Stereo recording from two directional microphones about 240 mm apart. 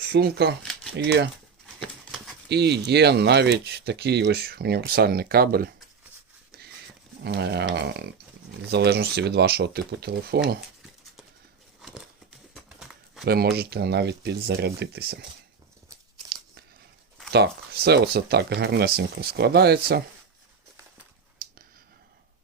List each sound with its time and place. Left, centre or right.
0.1 s speech: right
2.5 s speech: right
7.3 s speech: right
11.8 s a sound: centre
13.2 s speech: right
17.3 s speech: right